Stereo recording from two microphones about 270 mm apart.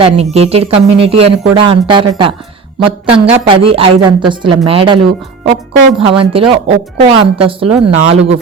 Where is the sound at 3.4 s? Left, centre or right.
Right.